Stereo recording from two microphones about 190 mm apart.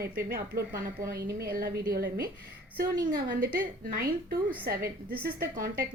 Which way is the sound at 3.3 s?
50° right (ahead or behind).